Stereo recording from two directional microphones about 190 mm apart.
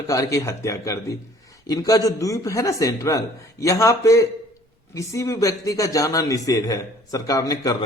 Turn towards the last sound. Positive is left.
turn(degrees=20)  # may be behind; listen again after turning